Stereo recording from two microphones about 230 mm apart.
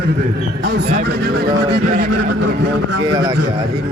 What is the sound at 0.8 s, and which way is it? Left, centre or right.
A man's voice, right.